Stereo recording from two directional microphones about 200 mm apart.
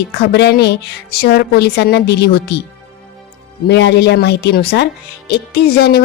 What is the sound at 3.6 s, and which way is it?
Speech, 55° left (ahead or behind).